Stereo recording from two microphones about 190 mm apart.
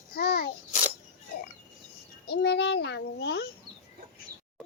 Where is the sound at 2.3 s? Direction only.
60° left (ahead or behind).